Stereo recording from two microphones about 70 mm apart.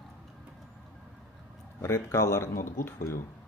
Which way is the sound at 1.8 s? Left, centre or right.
Left.